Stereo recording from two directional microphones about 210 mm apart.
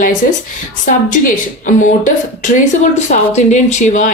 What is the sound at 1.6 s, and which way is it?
Speech, 35° left (ahead or behind).